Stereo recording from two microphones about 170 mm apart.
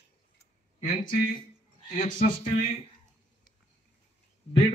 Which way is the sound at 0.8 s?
55° left (ahead or behind).